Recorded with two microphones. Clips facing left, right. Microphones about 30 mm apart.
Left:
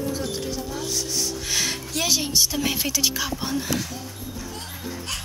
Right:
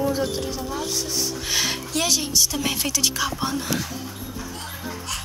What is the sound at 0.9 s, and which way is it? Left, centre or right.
Music, centre.